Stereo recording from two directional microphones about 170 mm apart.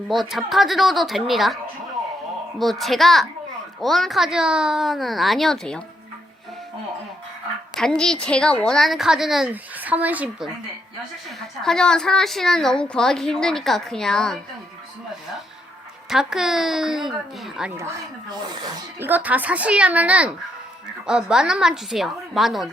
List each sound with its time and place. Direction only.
0.1 s a woman's voice: centre (ahead or behind)
2.6 s a woman's voice: centre (ahead or behind)
7.8 s a woman's voice: 5° left (ahead or behind)
11.6 s a woman's voice: 5° left (ahead or behind)
16.0 s a woman's voice: centre (ahead or behind)
17.7 s a child's voice: 15° right (ahead or behind)
18.9 s a child's voice: 10° right (ahead or behind)